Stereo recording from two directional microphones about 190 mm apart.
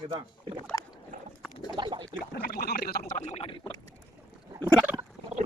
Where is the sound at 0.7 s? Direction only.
15° left (ahead or behind).